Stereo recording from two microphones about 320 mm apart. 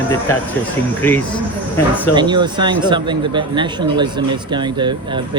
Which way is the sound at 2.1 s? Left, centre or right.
Centre.